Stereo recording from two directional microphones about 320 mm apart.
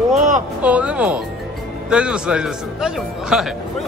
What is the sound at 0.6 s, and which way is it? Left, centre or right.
Speech, centre.